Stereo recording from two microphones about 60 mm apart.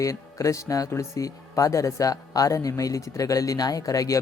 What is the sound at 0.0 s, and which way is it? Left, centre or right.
Speech, left.